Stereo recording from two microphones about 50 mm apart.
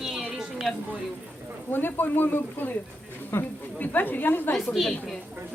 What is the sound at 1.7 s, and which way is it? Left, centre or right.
A man's voice, left.